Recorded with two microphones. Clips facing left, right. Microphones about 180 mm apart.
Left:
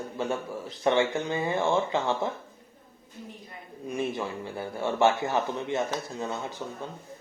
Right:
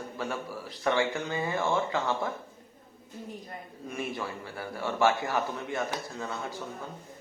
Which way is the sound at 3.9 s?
20° left (ahead or behind).